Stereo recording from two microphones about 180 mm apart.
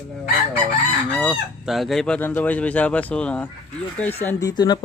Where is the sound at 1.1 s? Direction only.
Centre (ahead or behind).